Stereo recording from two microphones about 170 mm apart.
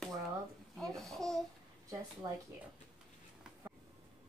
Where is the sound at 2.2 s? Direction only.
25° right (ahead or behind).